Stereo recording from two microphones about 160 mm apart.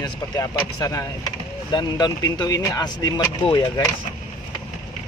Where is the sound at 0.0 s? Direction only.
20° left (ahead or behind).